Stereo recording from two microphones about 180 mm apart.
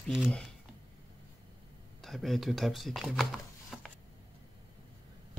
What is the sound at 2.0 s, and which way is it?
Speech, centre (ahead or behind).